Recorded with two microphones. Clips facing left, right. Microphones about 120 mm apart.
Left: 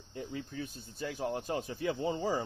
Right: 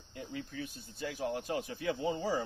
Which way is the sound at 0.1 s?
30° left (ahead or behind).